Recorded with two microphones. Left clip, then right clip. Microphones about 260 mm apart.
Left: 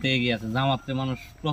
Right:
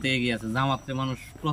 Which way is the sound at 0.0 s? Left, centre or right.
Centre.